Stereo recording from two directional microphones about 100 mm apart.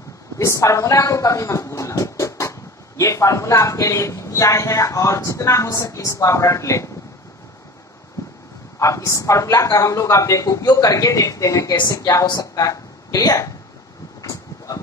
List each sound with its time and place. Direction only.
0.4 s speech: 30° left (ahead or behind)
8.7 s a woman's voice: 30° left (ahead or behind)
14.2 s vehicle: 35° left (ahead or behind)